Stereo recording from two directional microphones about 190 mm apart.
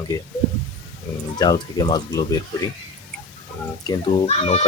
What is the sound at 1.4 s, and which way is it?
Speech, 20° left (ahead or behind).